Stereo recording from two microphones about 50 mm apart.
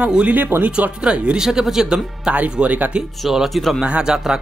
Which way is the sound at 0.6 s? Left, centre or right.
Right.